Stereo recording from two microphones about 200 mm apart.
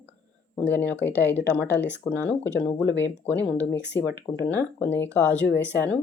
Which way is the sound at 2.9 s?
60° left (ahead or behind).